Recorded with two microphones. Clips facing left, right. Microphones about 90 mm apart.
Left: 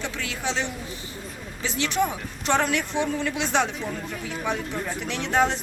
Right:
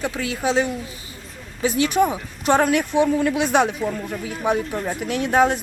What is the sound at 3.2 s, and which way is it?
Speech, 50° right (ahead or behind).